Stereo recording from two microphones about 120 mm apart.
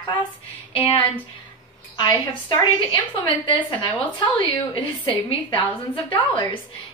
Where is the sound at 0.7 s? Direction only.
45° left (ahead or behind).